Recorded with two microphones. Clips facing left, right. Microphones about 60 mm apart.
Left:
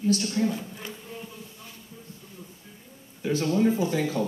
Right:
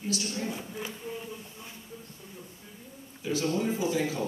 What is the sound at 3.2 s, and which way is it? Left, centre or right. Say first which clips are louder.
A woman's voice: left 5 dB; left.